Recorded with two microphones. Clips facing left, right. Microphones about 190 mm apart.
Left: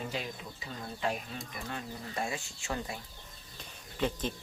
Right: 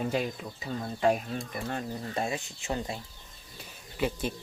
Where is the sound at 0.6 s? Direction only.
50° right (ahead or behind).